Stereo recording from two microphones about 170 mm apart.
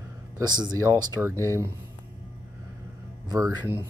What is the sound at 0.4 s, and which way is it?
Speech, 25° right (ahead or behind).